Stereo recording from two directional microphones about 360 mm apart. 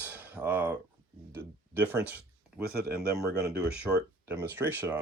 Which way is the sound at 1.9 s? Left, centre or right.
Centre.